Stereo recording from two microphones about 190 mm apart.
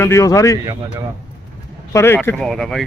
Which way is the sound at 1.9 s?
10° left (ahead or behind).